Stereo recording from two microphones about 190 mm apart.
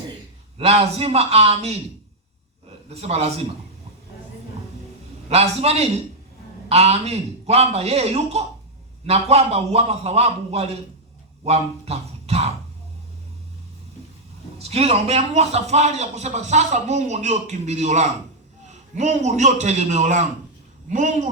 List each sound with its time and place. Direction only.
0.6 s a man's voice: 30° right (ahead or behind)
2.9 s a man's voice: 30° right (ahead or behind)
5.3 s a man's voice: 35° right (ahead or behind)
14.6 s a man's voice: 35° right (ahead or behind)